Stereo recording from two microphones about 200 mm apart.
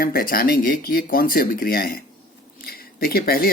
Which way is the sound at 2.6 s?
50° left (ahead or behind).